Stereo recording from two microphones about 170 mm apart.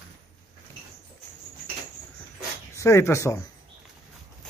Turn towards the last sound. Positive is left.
turn(degrees=15)  # may be behind; listen again after turning